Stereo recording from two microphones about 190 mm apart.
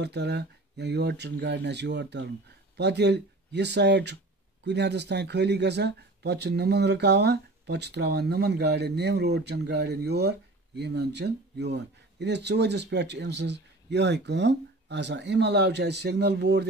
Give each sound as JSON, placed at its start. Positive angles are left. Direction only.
{"t": 0.0, "sound": "speech", "side_deg": -60}